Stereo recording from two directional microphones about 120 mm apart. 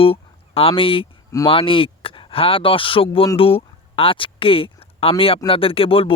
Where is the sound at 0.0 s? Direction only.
50° left (ahead or behind).